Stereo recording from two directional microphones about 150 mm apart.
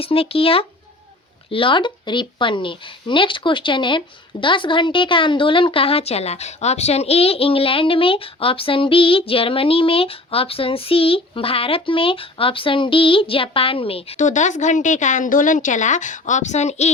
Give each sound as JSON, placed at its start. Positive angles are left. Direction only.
{"t": 0.0, "sound": "a woman's voice", "side_deg": 40}
{"t": 14.2, "sound": "speech", "side_deg": 55}